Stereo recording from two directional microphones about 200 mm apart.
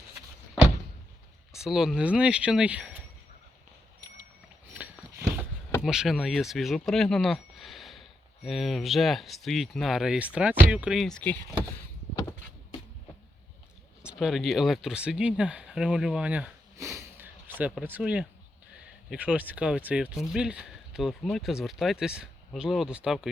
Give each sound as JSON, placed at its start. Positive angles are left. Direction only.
{"t": 1.5, "sound": "speech", "side_deg": 0}
{"t": 5.8, "sound": "speech", "side_deg": 0}
{"t": 14.0, "sound": "speech", "side_deg": -5}